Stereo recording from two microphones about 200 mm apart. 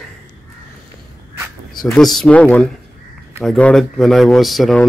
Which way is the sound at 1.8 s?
Centre (ahead or behind).